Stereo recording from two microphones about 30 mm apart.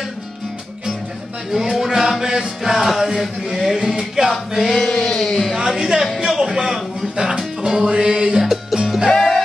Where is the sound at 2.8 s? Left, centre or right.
Centre.